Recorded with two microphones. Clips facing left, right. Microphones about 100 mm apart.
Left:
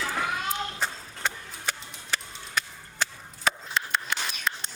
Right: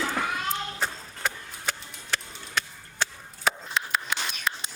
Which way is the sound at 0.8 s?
Centre (ahead or behind).